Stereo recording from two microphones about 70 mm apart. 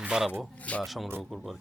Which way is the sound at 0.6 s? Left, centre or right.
Centre.